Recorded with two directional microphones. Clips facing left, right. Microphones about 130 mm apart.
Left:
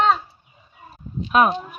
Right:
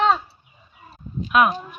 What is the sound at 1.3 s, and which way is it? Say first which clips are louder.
Speech: left 1 dB; 35° left (ahead or behind).